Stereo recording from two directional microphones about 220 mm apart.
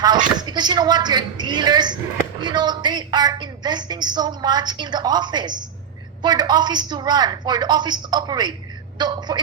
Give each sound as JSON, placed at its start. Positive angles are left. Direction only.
{"t": 0.3, "sound": "a woman's voice", "side_deg": -20}